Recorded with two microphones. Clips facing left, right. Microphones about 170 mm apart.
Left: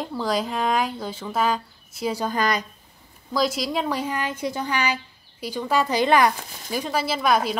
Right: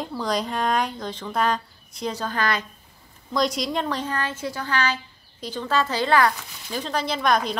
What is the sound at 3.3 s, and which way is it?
Speech, 5° left (ahead or behind).